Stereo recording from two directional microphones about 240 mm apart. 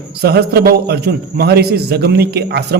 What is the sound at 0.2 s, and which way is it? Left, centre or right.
A man's voice, right.